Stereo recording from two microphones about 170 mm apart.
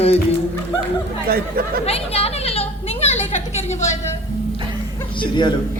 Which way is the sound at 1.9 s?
35° left (ahead or behind).